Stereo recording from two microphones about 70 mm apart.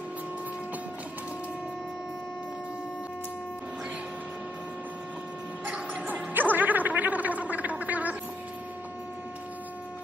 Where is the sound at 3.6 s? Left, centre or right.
Centre.